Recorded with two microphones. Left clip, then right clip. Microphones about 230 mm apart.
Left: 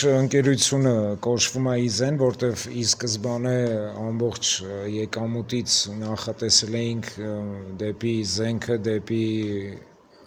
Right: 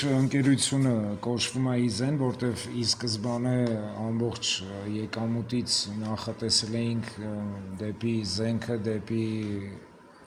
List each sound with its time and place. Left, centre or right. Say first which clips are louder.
0.0 s speech: left 7 dB; left